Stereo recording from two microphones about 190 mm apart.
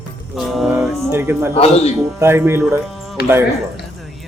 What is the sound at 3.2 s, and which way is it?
Speech, 55° left (ahead or behind).